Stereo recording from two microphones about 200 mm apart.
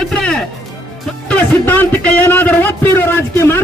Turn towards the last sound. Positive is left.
turn(degrees=10)  # may be behind; listen again after turning